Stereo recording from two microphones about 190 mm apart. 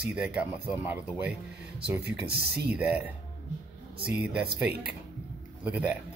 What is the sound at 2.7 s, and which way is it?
Speech, 5° right (ahead or behind).